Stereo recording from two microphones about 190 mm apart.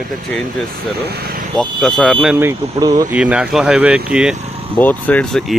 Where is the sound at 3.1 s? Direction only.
5° right (ahead or behind).